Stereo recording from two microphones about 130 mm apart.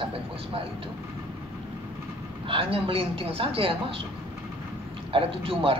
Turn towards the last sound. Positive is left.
turn(degrees=-45)  # may be behind; listen again after turning